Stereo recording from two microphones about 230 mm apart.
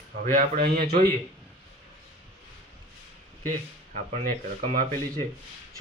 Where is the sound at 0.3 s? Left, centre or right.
Right.